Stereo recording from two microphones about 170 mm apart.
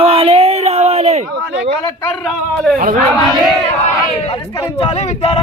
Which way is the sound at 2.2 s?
Centre (ahead or behind).